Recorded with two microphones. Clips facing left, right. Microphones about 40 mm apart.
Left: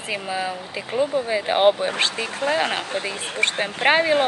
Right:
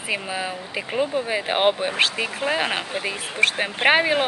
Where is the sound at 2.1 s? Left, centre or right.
Right.